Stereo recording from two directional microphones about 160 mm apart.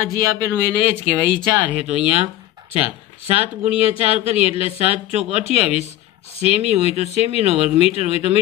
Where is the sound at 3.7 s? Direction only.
35° left (ahead or behind).